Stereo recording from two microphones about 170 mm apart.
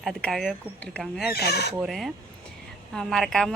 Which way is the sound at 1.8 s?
Centre (ahead or behind).